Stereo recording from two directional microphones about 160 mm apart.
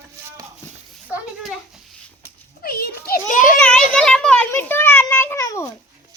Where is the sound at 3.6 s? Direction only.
5° left (ahead or behind).